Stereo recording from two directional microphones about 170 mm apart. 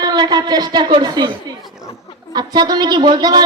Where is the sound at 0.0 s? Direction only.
25° right (ahead or behind).